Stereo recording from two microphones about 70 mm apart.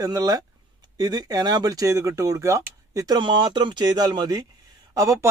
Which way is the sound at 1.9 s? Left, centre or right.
Right.